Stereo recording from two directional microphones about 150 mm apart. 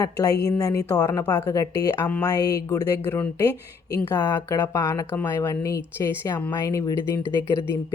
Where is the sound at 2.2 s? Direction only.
25° left (ahead or behind).